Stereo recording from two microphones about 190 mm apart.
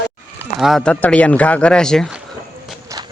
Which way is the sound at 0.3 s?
Centre (ahead or behind).